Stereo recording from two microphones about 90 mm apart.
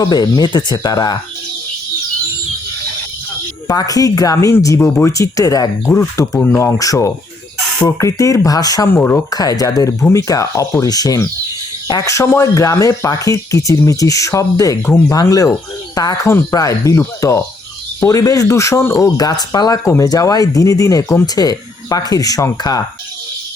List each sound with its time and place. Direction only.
0.0 s speech: 50° left (ahead or behind)
3.7 s speech: 45° left (ahead or behind)
14.8 s speech: 25° left (ahead or behind)
15.1 s speech: 40° left (ahead or behind)
19.0 s speech: 45° left (ahead or behind)
19.8 s speech: 35° left (ahead or behind)